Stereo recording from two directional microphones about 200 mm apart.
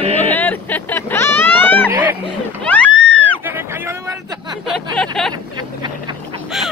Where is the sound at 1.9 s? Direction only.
10° right (ahead or behind).